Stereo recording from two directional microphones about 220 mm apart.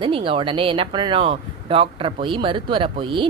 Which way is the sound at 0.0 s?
25° right (ahead or behind).